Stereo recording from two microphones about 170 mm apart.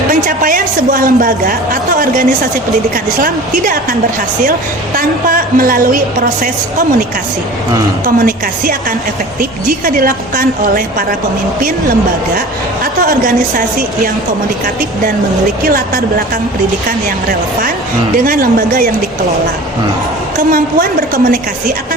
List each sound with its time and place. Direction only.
0.1 s a woman's voice: 55° right (ahead or behind)
4.9 s a woman's voice: 55° right (ahead or behind)
8.0 s a woman's voice: 55° right (ahead or behind)
12.8 s a woman's voice: 55° right (ahead or behind)
18.3 s a woman's voice: 55° right (ahead or behind)
20.5 s a woman's voice: 55° right (ahead or behind)